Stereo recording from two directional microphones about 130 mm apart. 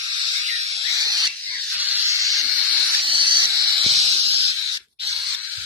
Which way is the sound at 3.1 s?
40° right (ahead or behind).